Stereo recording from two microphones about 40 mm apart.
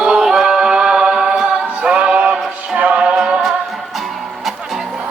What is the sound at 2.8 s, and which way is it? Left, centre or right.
A capella, right.